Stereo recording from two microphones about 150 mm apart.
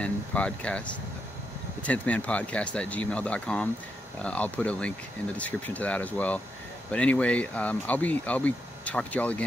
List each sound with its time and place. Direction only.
0.0 s speech: 10° left (ahead or behind)